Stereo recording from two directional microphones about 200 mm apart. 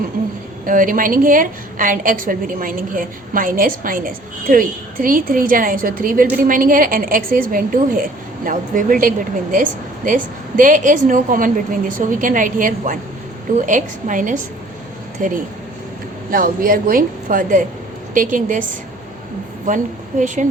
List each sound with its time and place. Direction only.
0.6 s a woman's voice: 45° right (ahead or behind)
19.6 s a woman's voice: 40° right (ahead or behind)